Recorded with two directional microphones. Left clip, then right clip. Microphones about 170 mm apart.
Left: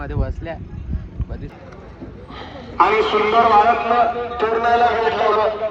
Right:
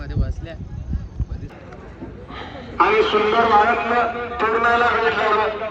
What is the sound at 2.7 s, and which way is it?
A man's voice, 25° left (ahead or behind).